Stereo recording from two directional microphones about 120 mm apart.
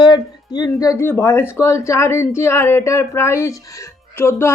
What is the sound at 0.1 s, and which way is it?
Speech, 35° left (ahead or behind).